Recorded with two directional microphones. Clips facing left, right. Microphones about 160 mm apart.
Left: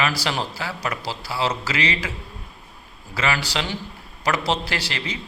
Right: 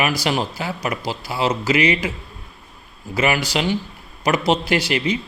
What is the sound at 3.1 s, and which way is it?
Speech, 15° right (ahead or behind).